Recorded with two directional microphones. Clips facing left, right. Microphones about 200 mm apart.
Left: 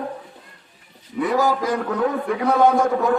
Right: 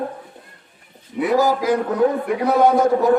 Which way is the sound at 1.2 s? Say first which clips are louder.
Right 2 dB; 5° right (ahead or behind).